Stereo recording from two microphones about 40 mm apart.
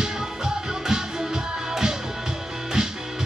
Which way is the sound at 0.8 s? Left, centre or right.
Centre.